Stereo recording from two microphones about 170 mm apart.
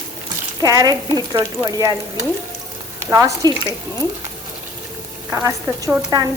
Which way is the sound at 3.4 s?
25° right (ahead or behind).